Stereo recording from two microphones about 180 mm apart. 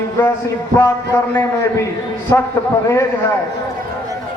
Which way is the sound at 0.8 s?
15° left (ahead or behind).